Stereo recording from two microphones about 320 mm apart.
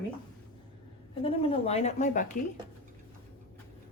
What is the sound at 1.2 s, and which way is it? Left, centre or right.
Speech, centre.